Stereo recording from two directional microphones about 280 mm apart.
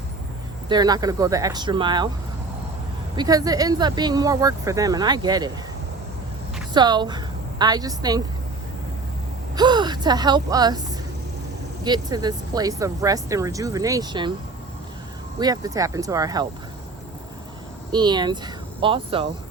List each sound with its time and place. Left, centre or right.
0.7 s speech: centre
3.2 s speech: centre
6.7 s a woman's voice: centre
9.6 s speech: centre
15.4 s speech: centre
17.9 s speech: centre